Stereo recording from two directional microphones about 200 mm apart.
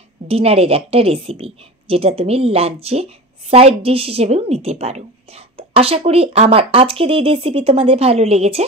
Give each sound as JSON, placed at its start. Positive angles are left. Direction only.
{"t": 0.3, "sound": "a woman's voice", "side_deg": -30}